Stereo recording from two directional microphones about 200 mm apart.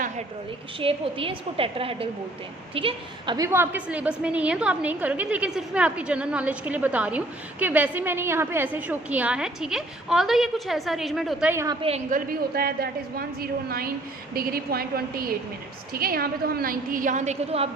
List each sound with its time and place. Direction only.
0.8 s a woman's voice: 25° right (ahead or behind)
11.8 s a man's voice: 30° right (ahead or behind)
12.3 s a woman's voice: 50° right (ahead or behind); by 17.7 s 35° right (ahead or behind)